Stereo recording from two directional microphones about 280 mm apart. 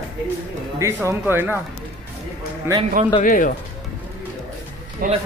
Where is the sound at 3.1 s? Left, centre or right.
Left.